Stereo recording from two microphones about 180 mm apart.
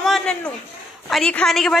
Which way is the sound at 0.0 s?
5° left (ahead or behind).